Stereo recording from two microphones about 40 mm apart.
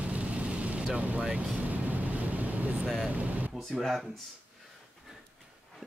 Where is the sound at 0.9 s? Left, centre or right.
Right.